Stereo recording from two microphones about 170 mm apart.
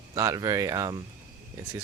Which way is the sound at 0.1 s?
20° right (ahead or behind).